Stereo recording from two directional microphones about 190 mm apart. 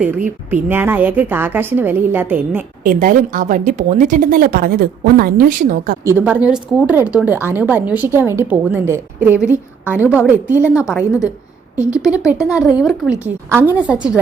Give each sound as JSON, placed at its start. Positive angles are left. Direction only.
{"t": 0.5, "sound": "a woman's voice", "side_deg": -10}
{"t": 2.8, "sound": "a woman's voice", "side_deg": -45}
{"t": 6.1, "sound": "a woman's voice", "side_deg": -10}